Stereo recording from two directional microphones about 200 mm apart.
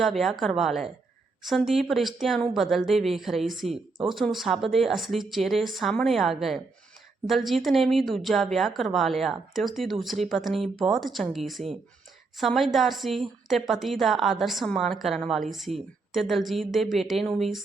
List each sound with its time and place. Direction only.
0.0 s a woman's voice: centre (ahead or behind)